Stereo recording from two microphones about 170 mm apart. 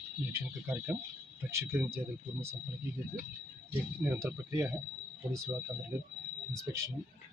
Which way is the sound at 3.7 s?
15° right (ahead or behind).